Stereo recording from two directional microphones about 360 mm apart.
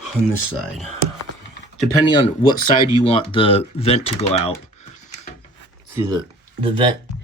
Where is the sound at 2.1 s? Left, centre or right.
Centre.